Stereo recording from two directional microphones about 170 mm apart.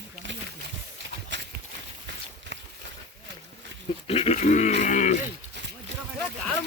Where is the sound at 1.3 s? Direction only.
90° right.